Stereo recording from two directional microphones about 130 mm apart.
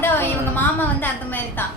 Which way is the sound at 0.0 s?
15° left (ahead or behind).